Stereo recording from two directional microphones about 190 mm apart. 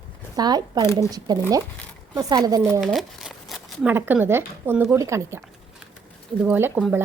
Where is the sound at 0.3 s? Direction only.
20° right (ahead or behind).